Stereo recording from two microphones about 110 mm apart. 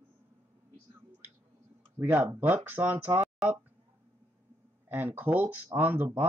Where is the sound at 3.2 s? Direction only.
5° right (ahead or behind).